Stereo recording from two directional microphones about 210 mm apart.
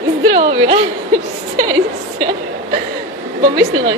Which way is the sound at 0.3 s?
25° right (ahead or behind).